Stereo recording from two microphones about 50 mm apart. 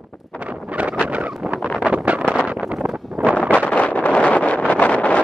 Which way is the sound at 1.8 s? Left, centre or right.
Right.